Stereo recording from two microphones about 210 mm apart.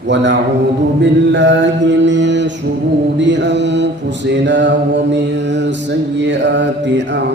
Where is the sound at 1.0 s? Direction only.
60° right (ahead or behind).